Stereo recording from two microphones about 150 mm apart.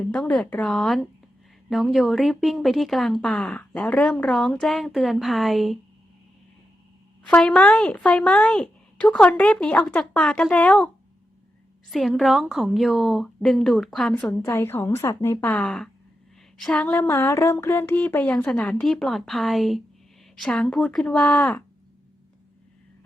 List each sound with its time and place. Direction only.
0.1 s a woman's voice: 5° left (ahead or behind)
7.3 s speech: 10° left (ahead or behind)
11.9 s a woman's voice: centre (ahead or behind)
14.3 s speech: 20° left (ahead or behind)
15.6 s a woman's voice: 5° left (ahead or behind)